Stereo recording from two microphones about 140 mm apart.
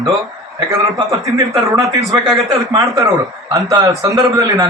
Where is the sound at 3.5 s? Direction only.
25° right (ahead or behind).